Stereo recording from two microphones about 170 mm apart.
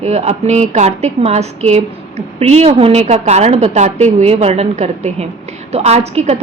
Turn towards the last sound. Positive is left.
turn(degrees=-40)  # may be behind; listen again after turning